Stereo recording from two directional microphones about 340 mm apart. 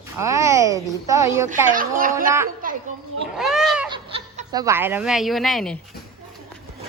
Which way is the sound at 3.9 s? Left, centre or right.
Centre.